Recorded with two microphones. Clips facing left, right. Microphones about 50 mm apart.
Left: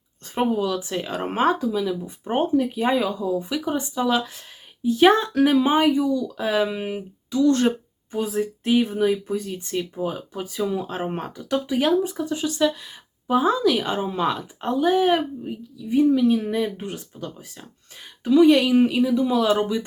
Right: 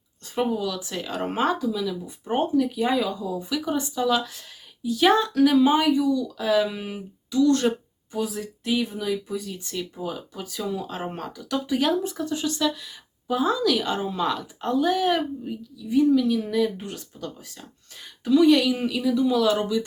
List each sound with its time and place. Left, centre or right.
0.3 s speech: left
11.7 s speech: centre